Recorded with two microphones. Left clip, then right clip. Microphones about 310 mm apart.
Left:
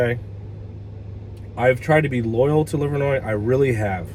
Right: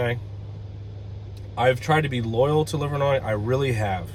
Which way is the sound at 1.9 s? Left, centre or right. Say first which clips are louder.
Left 4 dB; right.